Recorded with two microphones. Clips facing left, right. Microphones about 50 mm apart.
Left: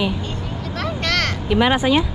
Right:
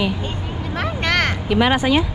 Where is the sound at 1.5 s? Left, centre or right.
Right.